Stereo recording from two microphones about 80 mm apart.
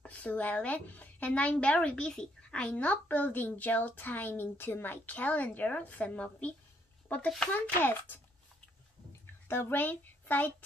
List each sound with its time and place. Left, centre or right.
0.0 s a woman's voice: centre
9.2 s a child's voice: left